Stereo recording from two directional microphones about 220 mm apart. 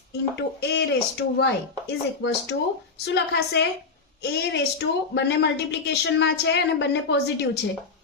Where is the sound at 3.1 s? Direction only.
50° left (ahead or behind).